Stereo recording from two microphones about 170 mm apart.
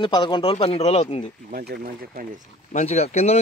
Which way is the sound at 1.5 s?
65° right (ahead or behind).